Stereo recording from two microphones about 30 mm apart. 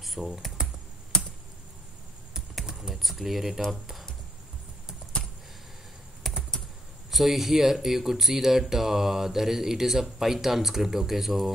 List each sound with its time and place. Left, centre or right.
0.0 s computer keyboard: centre
1.1 s computer keyboard: left
2.9 s speech: centre
6.2 s typing: centre
7.1 s speech: centre